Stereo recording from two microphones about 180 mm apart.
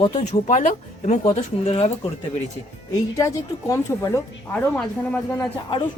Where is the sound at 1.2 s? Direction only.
30° left (ahead or behind).